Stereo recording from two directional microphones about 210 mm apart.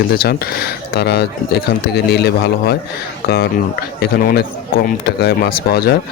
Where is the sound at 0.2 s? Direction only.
45° left (ahead or behind).